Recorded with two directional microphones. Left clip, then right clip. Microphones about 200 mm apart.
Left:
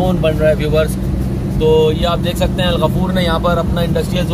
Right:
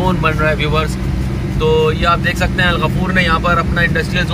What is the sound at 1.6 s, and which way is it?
Speech, 35° right (ahead or behind).